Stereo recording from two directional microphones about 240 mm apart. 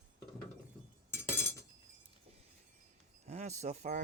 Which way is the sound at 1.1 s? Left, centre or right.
Centre.